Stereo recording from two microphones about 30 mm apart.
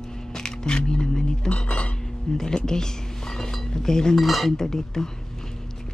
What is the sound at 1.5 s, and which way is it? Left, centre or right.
Cutlery, left.